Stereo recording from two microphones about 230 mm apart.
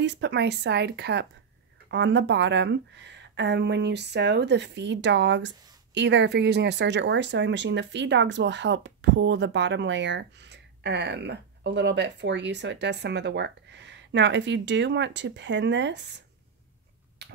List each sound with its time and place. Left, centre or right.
0.0 s speech: right